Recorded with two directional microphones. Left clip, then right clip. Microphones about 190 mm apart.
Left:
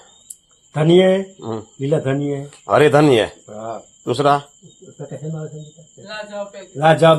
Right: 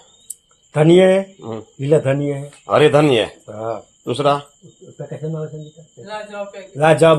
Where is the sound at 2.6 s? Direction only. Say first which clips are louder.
Even; 25° left (ahead or behind).